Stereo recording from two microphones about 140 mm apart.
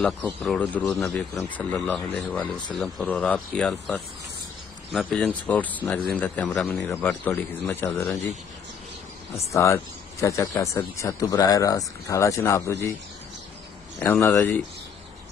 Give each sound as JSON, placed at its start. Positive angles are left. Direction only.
{"t": 0.0, "sound": "speech", "side_deg": 5}
{"t": 7.2, "sound": "speech", "side_deg": 15}
{"t": 9.5, "sound": "speech", "side_deg": 20}
{"t": 13.9, "sound": "speech", "side_deg": 20}